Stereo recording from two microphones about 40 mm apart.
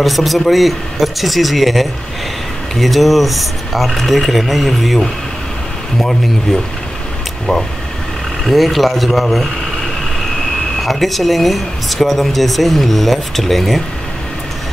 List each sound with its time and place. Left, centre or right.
0.0 s speech: centre
8.5 s speech: centre